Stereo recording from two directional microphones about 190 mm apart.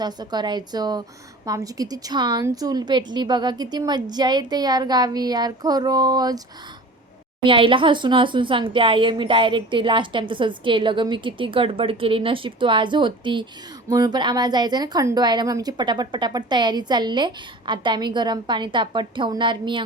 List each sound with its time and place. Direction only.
0.0 s speech: 20° right (ahead or behind)
7.4 s speech: 25° right (ahead or behind)